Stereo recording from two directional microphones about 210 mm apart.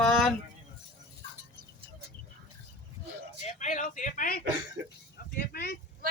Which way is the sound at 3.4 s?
35° left (ahead or behind).